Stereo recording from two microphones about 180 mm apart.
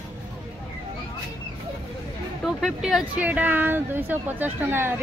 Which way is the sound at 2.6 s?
Centre (ahead or behind).